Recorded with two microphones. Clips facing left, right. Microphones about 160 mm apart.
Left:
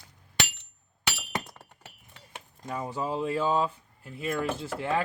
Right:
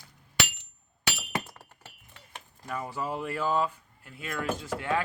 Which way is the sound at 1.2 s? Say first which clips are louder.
Right 1 dB; 5° right (ahead or behind).